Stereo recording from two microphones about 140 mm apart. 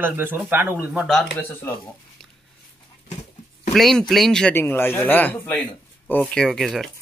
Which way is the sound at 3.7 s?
5° left (ahead or behind).